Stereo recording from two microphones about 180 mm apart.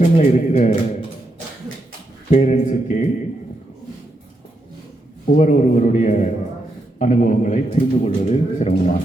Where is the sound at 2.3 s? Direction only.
40° left (ahead or behind).